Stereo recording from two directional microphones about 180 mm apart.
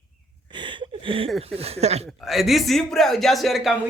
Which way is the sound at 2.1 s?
Centre (ahead or behind).